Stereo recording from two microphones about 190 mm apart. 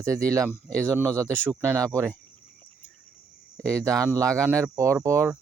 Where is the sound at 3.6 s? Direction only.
15° right (ahead or behind).